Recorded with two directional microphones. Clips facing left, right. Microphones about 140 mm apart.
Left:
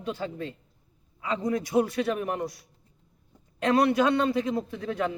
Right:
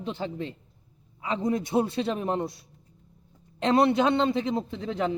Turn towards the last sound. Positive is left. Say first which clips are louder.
# right 1 dB
turn(degrees=-20)  # may be behind; listen again after turning